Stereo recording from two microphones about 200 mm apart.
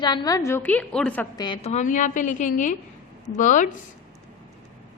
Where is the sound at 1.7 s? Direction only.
40° left (ahead or behind).